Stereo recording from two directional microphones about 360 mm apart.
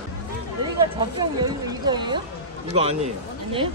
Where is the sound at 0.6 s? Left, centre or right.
Centre.